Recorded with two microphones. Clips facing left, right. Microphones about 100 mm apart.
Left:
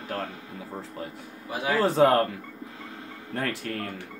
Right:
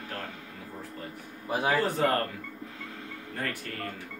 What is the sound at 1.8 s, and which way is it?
Speech, 90° left.